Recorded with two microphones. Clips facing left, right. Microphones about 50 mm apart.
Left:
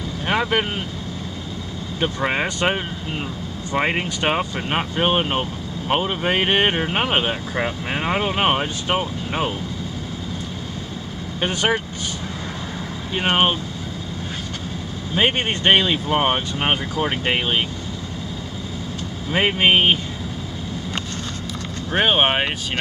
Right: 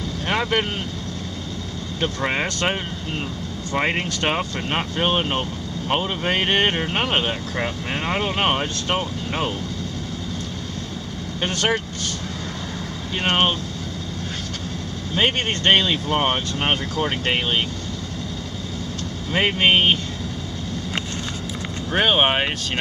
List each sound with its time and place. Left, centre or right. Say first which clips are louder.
0.3 s speech: left 2 dB; centre
2.0 s speech: left 2 dB; centre
11.4 s speech: left 1 dB; centre
13.1 s speech: left 1 dB; centre
15.1 s speech: left 1 dB; centre
19.3 s speech: left 1 dB; centre
21.9 s speech: left 1 dB; centre